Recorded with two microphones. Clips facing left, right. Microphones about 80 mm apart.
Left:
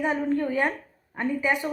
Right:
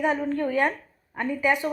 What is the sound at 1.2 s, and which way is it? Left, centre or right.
Speech, left.